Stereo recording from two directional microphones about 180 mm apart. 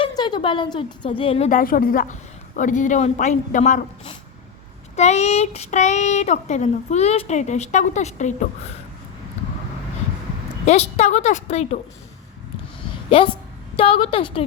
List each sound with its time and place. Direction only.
0.0 s a woman's voice: 25° left (ahead or behind)
1.5 s a woman's voice: 50° left (ahead or behind)
10.7 s speech: 35° left (ahead or behind)
13.1 s a woman's voice: 30° left (ahead or behind)